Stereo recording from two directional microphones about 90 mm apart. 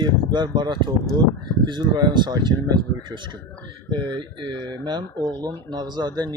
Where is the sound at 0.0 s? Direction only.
55° right (ahead or behind).